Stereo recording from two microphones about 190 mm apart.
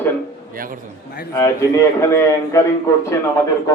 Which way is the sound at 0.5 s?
45° right (ahead or behind).